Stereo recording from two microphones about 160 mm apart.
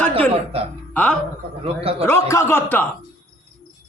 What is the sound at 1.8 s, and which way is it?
Speech, 40° right (ahead or behind).